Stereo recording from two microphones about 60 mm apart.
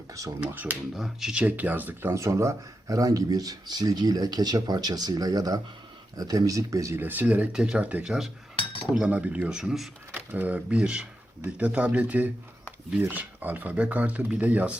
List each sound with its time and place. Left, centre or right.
0.3 s speech: right
0.9 s speech: centre
1.3 s speech: right
2.1 s speech: right
6.9 s speech: right
7.5 s speech: centre
8.0 s cutlery: centre
9.0 s speech: right
9.6 s speech: centre
10.2 s speech: right